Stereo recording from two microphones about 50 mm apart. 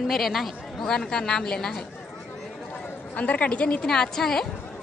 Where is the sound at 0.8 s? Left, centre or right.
Centre.